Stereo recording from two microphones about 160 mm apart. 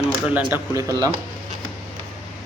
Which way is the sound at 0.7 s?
20° right (ahead or behind).